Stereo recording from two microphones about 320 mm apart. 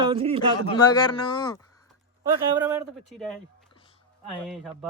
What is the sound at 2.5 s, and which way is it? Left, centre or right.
Speech, centre.